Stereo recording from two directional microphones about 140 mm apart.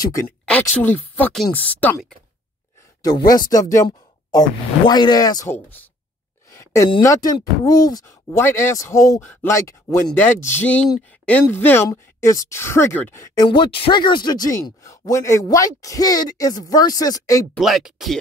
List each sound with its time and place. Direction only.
0.0 s speech: 20° left (ahead or behind)
0.5 s speech: 10° left (ahead or behind)
3.0 s speech: 25° left (ahead or behind)
5.5 s speech: 15° left (ahead or behind)
6.5 s a sound: 20° left (ahead or behind)
7.0 s speech: 25° left (ahead or behind)
13.3 s speech: 30° left (ahead or behind)
17.6 s speech: centre (ahead or behind)